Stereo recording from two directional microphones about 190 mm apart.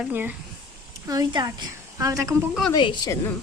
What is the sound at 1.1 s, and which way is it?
A woman's voice, 20° right (ahead or behind).